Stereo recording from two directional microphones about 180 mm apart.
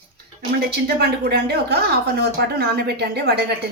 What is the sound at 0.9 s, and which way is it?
Speech, 60° right (ahead or behind).